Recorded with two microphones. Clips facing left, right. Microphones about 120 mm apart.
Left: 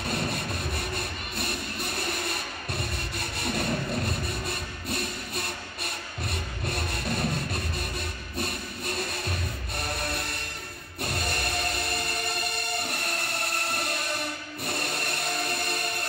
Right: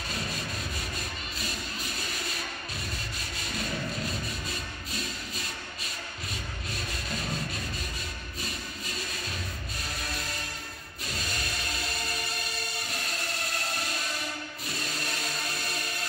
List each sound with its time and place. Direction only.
0.1 s music: 60° left (ahead or behind)
6.7 s rub: 60° left (ahead or behind)
8.4 s music: 60° left (ahead or behind)
12.8 s music: 60° left (ahead or behind)
14.7 s vehicle: 60° left (ahead or behind)